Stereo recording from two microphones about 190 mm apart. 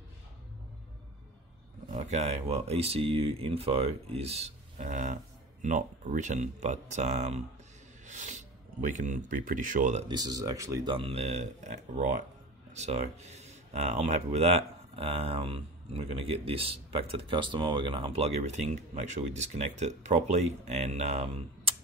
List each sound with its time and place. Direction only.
1.9 s speech: 35° right (ahead or behind)
10.0 s speech: 20° right (ahead or behind)
11.1 s speech: 35° right (ahead or behind)